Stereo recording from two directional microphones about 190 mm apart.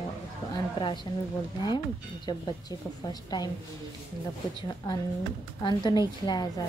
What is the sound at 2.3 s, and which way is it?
A woman's voice, 20° left (ahead or behind).